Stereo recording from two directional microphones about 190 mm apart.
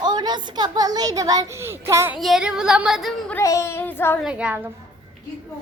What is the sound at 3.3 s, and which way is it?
Child singing, 15° left (ahead or behind).